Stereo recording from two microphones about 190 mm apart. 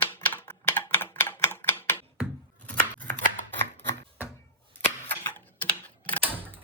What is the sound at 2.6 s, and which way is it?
Chopping, 10° left (ahead or behind).